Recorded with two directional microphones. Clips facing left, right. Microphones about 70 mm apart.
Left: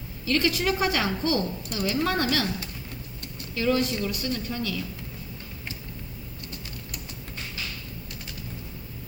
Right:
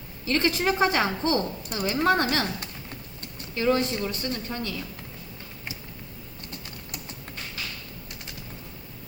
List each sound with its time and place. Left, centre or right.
0.3 s a woman's voice: right